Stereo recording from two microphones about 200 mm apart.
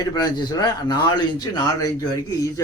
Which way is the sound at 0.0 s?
20° left (ahead or behind).